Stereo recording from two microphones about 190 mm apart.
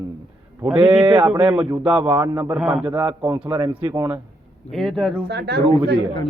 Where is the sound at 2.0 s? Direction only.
25° right (ahead or behind); by 2.8 s 5° right (ahead or behind).